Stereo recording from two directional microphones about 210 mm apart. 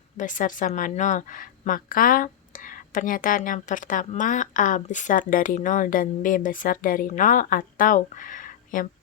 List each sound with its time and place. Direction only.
0.2 s a woman's voice: 40° left (ahead or behind)